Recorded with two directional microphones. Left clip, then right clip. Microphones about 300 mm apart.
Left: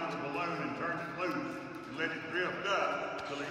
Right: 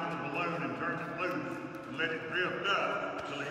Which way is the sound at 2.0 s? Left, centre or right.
Left.